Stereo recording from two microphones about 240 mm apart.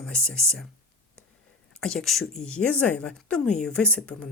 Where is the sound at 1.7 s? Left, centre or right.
Centre.